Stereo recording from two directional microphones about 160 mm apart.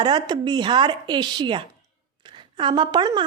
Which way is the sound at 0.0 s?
30° right (ahead or behind).